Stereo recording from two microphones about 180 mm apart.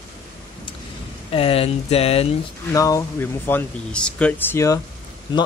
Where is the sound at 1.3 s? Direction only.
30° left (ahead or behind).